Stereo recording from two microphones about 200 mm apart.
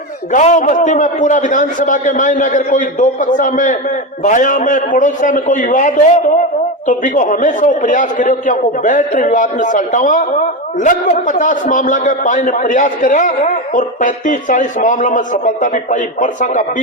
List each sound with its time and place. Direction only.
0.3 s a man's voice: 35° left (ahead or behind)